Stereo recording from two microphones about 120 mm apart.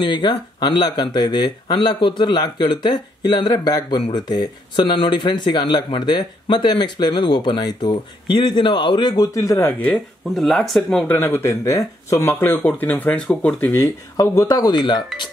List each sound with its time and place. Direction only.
0.0 s speech: 40° left (ahead or behind)
9.1 s speech: 30° left (ahead or behind)
10.3 s speech: centre (ahead or behind)
11.1 s speech: 20° left (ahead or behind); by 15.0 s 35° left (ahead or behind)